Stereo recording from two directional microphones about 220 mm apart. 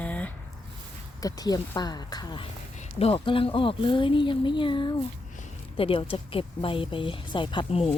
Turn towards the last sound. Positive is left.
turn(degrees=25)  # may be behind; listen again after turning